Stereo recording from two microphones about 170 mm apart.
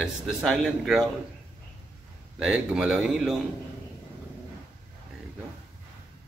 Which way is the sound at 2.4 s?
5° right (ahead or behind).